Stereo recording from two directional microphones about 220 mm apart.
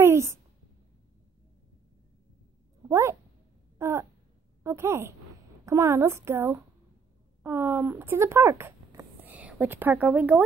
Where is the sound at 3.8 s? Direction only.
10° right (ahead or behind).